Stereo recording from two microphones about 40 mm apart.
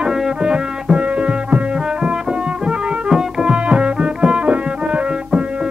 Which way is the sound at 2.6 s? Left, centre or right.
Right.